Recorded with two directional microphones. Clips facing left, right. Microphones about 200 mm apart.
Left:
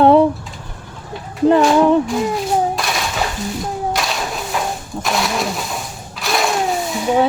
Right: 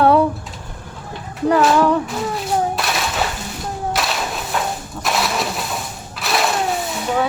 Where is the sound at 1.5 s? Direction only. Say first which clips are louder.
Left 3 dB; 25° left (ahead or behind).